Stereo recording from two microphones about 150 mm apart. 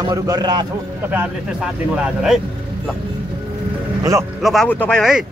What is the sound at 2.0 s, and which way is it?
Speech, 5° right (ahead or behind).